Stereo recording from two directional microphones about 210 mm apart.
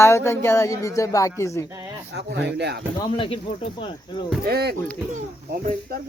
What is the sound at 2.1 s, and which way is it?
Speech, 55° right (ahead or behind).